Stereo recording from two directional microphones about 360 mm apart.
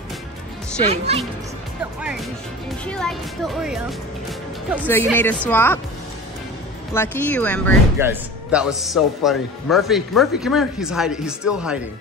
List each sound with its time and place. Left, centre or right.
0.8 s speech: centre
2.0 s speech: centre
4.3 s music: centre
5.0 s speech: centre
6.9 s speech: centre